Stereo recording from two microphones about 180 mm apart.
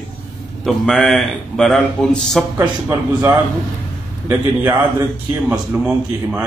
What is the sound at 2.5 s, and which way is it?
A man's voice, 20° right (ahead or behind).